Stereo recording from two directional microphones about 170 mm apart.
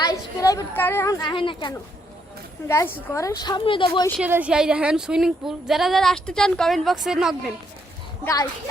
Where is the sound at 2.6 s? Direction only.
15° left (ahead or behind).